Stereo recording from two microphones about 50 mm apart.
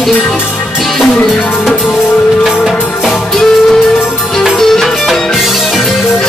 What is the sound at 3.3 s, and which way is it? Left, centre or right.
Music, centre.